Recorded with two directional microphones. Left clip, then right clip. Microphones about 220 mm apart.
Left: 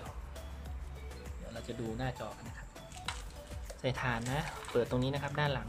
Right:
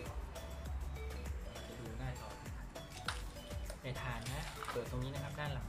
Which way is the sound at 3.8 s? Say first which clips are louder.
Left 11 dB; 50° left (ahead or behind).